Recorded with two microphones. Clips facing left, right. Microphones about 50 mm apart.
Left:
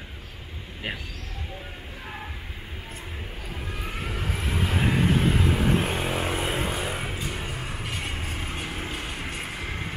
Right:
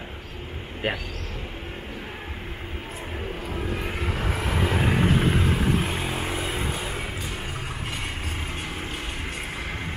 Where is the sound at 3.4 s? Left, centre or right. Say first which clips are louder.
Right 5 dB; right.